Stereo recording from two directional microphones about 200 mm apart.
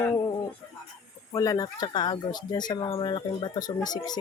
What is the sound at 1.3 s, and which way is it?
Speech, 15° left (ahead or behind).